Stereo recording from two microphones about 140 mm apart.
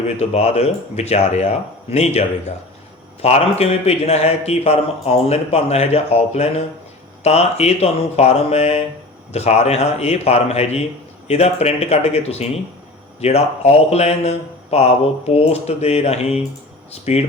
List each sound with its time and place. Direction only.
0.2 s a man's voice: 50° left (ahead or behind)